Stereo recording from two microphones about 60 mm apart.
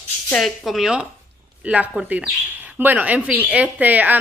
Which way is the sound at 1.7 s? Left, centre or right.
Right.